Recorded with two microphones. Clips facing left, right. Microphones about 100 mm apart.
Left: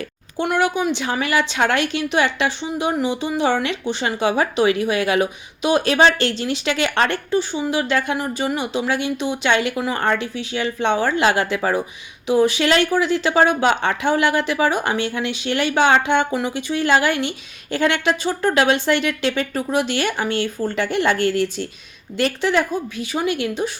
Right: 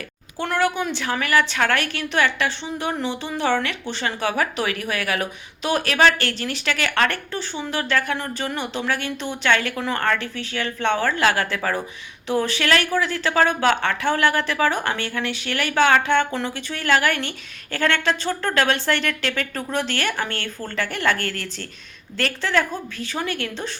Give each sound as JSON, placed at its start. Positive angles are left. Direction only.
{"t": 0.3, "sound": "a woman's voice", "side_deg": 15}